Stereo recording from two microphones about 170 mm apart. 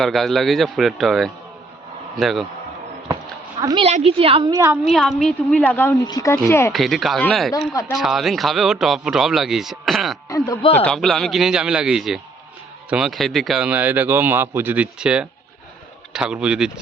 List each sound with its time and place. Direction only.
0.0 s a man's voice: centre (ahead or behind)
3.6 s speech: 25° right (ahead or behind)
3.8 s a woman's voice: 35° right (ahead or behind); by 4.8 s 20° right (ahead or behind)
4.9 s a man's voice: centre (ahead or behind)
6.7 s a man's voice: centre (ahead or behind)
7.7 s speech: 20° left (ahead or behind)
7.9 s a man's voice: centre (ahead or behind)
10.2 s speech: 20° left (ahead or behind)
10.6 s a man's voice: 35° left (ahead or behind)
10.8 s a man's voice: centre (ahead or behind)